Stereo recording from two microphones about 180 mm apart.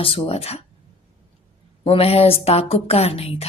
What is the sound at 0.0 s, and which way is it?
Speech, 30° left (ahead or behind).